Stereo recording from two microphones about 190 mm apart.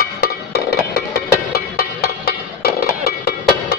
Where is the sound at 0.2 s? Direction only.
60° left (ahead or behind).